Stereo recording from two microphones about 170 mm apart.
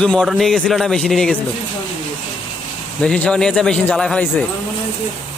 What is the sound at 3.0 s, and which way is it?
Speech, 5° left (ahead or behind).